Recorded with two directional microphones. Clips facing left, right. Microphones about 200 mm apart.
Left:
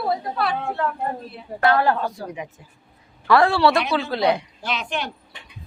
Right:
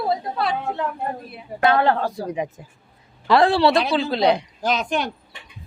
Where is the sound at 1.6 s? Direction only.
20° right (ahead or behind).